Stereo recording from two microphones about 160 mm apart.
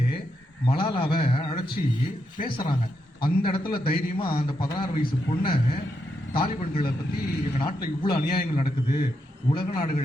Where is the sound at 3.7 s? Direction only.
70° left (ahead or behind).